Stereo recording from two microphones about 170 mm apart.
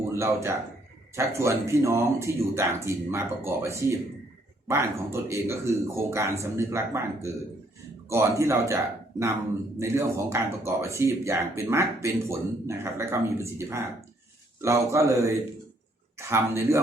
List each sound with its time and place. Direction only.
0.0 s speech: 15° right (ahead or behind)